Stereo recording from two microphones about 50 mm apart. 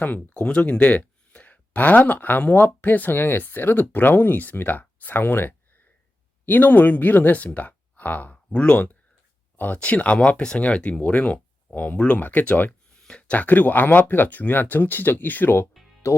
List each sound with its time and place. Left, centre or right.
0.0 s speech: left
0.3 s speech: left
8.4 s speech: left
15.8 s music: centre